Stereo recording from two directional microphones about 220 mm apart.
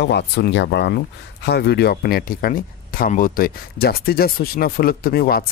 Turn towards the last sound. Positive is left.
turn(degrees=45)  # may be behind; listen again after turning